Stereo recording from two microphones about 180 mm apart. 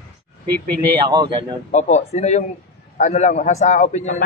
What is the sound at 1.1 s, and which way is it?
Speech, 25° right (ahead or behind).